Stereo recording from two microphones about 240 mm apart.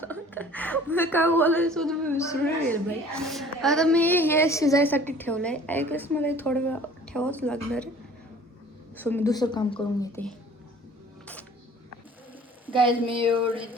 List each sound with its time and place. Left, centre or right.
0.0 s a woman's voice: centre
9.0 s a woman's voice: centre
13.1 s a sound: right